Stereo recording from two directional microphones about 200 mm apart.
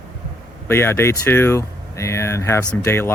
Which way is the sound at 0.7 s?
10° left (ahead or behind).